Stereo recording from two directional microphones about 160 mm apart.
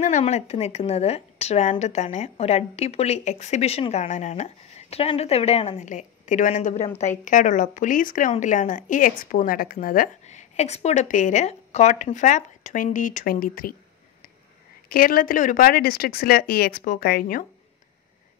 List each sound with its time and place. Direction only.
0.0 s a woman's voice: 45° left (ahead or behind)
10.2 s a woman's voice: 45° left (ahead or behind); by 13.7 s 65° left (ahead or behind)
14.9 s speech: 65° left (ahead or behind)